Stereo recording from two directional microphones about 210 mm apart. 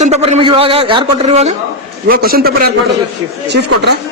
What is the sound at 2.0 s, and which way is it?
Speech, 45° right (ahead or behind).